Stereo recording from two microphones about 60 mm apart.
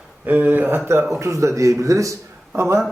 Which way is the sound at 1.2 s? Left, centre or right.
Right.